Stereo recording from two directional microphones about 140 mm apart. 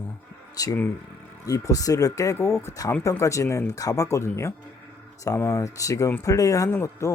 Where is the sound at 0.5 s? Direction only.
25° left (ahead or behind).